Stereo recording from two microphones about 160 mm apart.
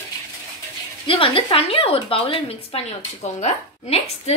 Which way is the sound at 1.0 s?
35° left (ahead or behind).